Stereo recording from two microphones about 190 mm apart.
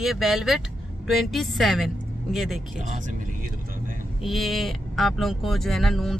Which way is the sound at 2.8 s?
40° right (ahead or behind).